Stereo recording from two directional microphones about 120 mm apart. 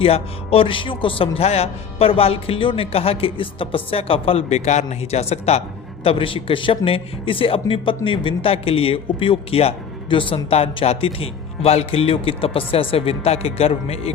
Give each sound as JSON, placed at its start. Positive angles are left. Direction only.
{"t": 0.0, "sound": "speech", "side_deg": 50}